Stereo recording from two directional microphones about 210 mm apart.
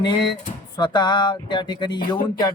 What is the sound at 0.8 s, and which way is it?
Speech, 20° left (ahead or behind).